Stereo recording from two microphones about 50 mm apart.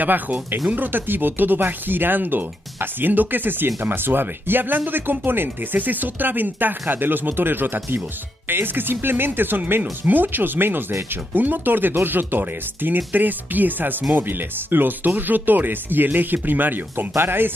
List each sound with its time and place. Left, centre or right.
0.0 s speech: right